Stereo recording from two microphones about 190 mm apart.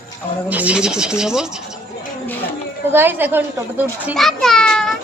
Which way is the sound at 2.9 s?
10° right (ahead or behind).